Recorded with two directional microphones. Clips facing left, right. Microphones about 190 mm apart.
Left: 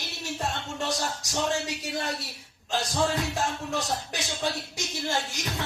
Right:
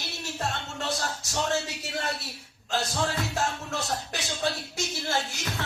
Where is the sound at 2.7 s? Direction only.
15° left (ahead or behind).